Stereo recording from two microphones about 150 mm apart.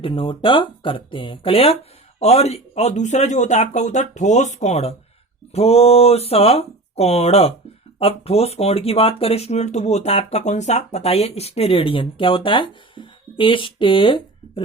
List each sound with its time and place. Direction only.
0.0 s speech: 35° left (ahead or behind)